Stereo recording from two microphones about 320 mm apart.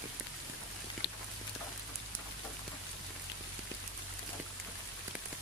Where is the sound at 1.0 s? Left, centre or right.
Left.